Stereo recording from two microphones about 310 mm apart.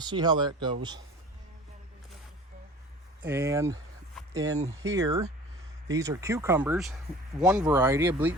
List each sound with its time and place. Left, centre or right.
0.0 s speech: centre
3.2 s speech: centre
4.4 s speech: right
4.9 s speech: centre